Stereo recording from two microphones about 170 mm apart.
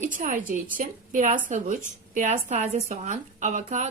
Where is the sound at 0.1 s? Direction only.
50° right (ahead or behind).